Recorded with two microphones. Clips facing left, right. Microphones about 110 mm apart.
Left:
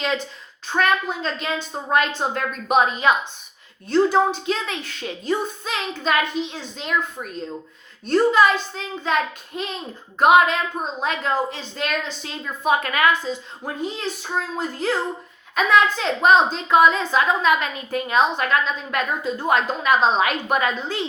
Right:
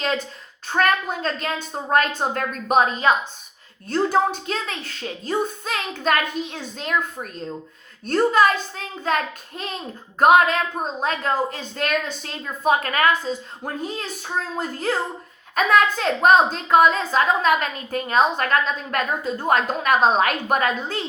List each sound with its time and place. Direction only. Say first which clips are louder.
0.8 s a woman's voice: even; 45° right (ahead or behind)